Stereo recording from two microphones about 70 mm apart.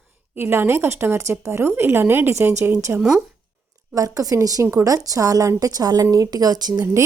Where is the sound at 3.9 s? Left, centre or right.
Right.